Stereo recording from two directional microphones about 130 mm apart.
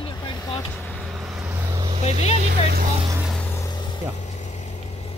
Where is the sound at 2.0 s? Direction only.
55° left (ahead or behind).